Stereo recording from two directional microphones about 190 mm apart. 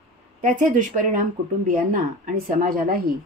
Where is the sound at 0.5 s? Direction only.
45° right (ahead or behind).